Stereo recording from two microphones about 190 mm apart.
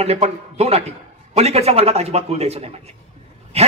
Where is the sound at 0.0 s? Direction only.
35° right (ahead or behind).